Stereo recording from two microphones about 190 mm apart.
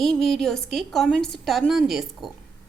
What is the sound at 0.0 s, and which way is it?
A woman's voice, centre (ahead or behind).